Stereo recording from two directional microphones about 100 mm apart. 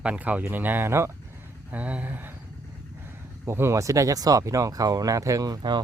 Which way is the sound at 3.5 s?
25° right (ahead or behind).